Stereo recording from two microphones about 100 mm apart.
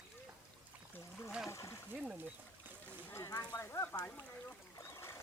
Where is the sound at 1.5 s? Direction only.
30° left (ahead or behind).